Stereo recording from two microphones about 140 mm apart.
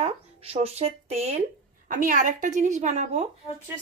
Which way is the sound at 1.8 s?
70° right (ahead or behind).